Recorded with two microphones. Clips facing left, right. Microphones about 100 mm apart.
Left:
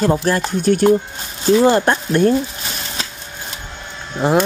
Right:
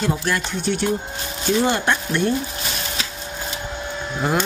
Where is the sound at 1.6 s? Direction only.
40° left (ahead or behind).